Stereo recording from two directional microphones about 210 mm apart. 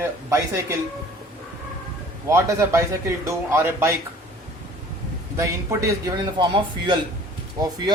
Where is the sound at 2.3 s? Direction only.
15° right (ahead or behind).